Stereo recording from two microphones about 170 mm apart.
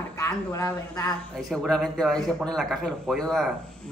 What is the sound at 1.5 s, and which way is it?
A man's voice, 5° left (ahead or behind).